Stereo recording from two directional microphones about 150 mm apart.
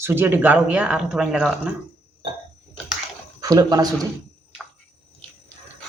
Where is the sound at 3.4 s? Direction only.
25° right (ahead or behind).